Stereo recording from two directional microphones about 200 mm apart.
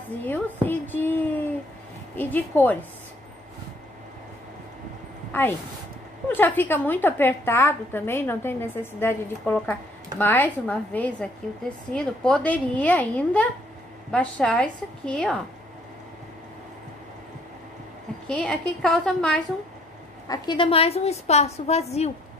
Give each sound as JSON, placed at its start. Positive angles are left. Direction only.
{"t": 0.2, "sound": "a woman's voice", "side_deg": 10}
{"t": 5.3, "sound": "a woman's voice", "side_deg": 10}
{"t": 18.2, "sound": "a woman's voice", "side_deg": 5}
{"t": 20.2, "sound": "a woman's voice", "side_deg": 25}